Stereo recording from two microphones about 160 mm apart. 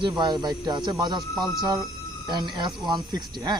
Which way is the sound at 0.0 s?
30° right (ahead or behind).